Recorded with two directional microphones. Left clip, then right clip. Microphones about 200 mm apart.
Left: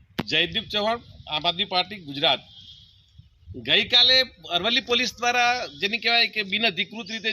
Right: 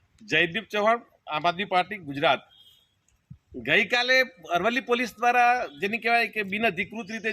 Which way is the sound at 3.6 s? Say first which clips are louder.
Left 4 dB; 10° right (ahead or behind).